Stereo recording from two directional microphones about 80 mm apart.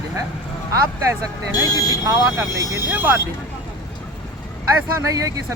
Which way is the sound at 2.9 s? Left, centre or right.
Right.